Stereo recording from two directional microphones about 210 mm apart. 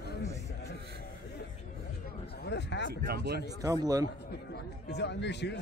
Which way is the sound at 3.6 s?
15° right (ahead or behind).